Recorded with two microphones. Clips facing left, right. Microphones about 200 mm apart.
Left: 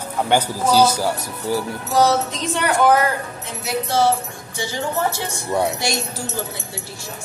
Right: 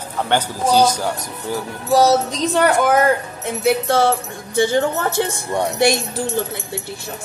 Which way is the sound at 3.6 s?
55° right (ahead or behind).